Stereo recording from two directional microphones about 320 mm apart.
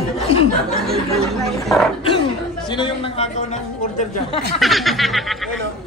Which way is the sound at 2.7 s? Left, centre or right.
Centre.